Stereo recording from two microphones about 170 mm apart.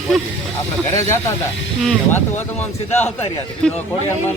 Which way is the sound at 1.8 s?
10° left (ahead or behind).